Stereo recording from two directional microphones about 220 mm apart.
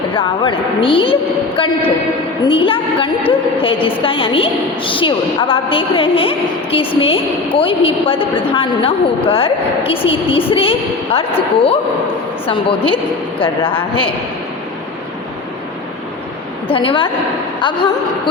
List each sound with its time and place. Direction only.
0.1 s a woman's voice: 25° left (ahead or behind)
16.6 s a woman's voice: 25° left (ahead or behind)